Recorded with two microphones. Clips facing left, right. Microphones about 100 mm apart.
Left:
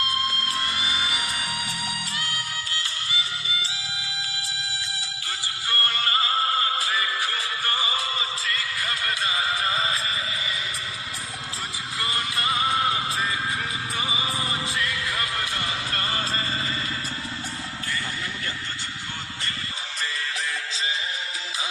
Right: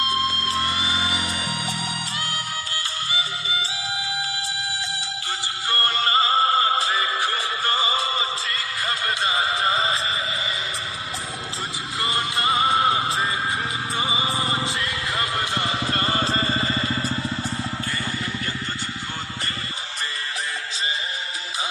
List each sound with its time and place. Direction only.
0.0 s music: 30° right (ahead or behind)
11.9 s music: 25° right (ahead or behind)